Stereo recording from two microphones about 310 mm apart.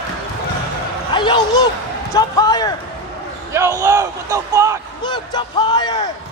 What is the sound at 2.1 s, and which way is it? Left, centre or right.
Speech, centre.